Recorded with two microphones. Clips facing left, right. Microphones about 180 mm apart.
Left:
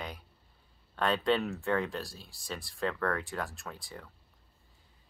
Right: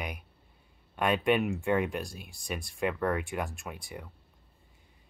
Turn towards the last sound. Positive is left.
turn(degrees=-15)  # may be behind; listen again after turning